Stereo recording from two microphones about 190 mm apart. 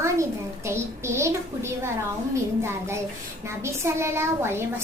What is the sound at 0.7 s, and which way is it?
A woman's voice, 15° right (ahead or behind).